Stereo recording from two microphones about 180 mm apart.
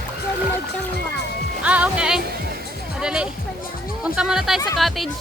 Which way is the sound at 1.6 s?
5° right (ahead or behind).